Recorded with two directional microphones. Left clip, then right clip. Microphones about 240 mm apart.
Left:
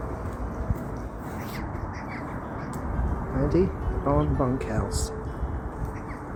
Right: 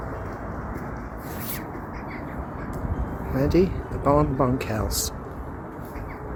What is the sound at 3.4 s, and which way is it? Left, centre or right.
Speech, centre.